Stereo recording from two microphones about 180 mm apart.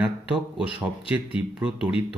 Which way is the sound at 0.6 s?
5° right (ahead or behind).